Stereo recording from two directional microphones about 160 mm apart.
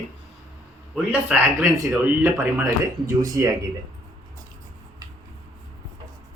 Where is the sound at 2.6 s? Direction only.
20° right (ahead or behind).